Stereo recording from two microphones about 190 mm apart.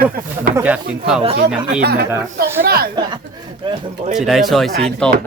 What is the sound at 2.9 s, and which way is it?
Speech, 25° right (ahead or behind).